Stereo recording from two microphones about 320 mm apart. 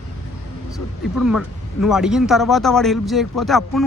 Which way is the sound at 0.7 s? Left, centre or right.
Centre.